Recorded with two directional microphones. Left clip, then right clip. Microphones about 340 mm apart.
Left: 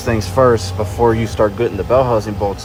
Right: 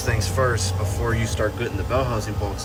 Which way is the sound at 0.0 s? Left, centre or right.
Centre.